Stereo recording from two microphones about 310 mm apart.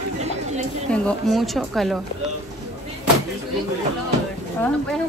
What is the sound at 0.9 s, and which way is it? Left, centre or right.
Speech, centre.